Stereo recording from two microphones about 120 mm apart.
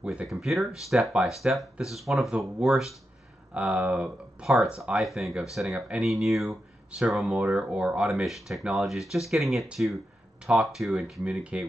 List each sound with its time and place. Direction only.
0.0 s speech: 10° right (ahead or behind)